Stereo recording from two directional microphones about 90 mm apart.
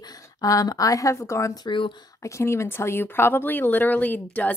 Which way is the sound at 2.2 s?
30° left (ahead or behind).